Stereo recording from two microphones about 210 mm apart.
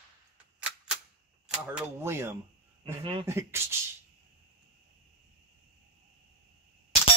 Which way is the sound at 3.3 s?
15° right (ahead or behind).